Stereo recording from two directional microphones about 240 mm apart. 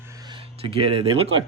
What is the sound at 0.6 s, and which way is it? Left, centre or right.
Speech, right.